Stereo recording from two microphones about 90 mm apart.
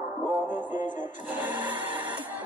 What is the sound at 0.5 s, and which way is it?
Speech, 20° right (ahead or behind).